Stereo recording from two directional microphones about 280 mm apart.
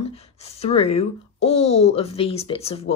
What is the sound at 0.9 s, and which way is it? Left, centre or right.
Speech, left.